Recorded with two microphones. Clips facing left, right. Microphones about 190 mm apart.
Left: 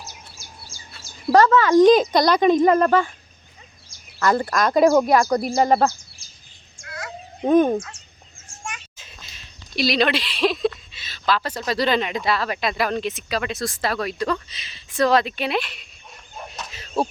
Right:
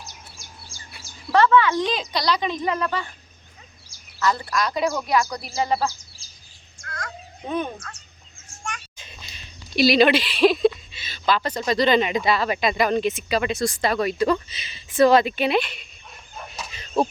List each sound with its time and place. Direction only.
0.0 s bird: centre (ahead or behind)
1.3 s speech: 40° left (ahead or behind)
4.2 s speech: 50° left (ahead or behind)
6.8 s a sound: 10° left (ahead or behind)
7.4 s speech: 45° left (ahead or behind)
8.6 s speech: 5° left (ahead or behind)
16.6 s a sound: centre (ahead or behind)